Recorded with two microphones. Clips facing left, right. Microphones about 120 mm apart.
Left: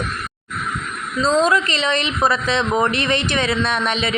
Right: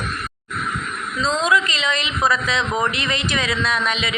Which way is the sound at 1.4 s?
35° left (ahead or behind).